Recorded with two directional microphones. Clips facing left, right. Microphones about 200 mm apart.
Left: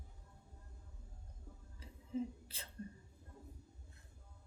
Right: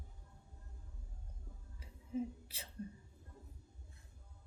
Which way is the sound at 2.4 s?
10° right (ahead or behind).